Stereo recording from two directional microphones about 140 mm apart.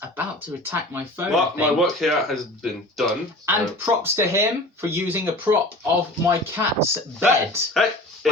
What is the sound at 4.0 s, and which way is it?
Speech, 20° right (ahead or behind).